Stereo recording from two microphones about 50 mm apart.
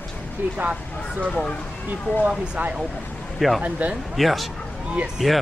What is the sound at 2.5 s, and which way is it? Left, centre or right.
Speech, right.